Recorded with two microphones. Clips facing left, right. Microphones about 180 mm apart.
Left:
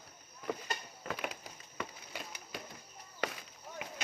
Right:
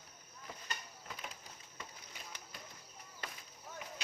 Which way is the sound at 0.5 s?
70° left (ahead or behind).